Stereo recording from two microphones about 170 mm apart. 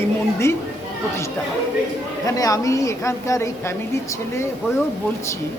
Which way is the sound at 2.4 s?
20° left (ahead or behind).